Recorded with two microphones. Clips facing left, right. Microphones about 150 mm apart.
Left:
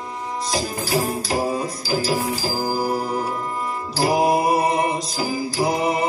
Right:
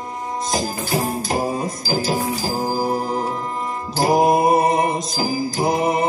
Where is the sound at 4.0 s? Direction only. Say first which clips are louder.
Right 3 dB; 45° right (ahead or behind).